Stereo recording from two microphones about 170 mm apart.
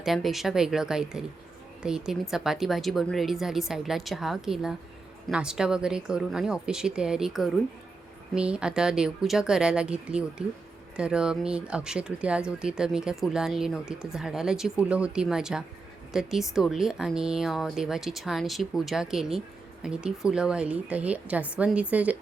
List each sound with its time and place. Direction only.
0.0 s a woman's voice: centre (ahead or behind)